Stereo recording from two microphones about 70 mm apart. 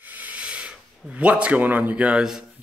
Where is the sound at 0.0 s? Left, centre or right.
Right.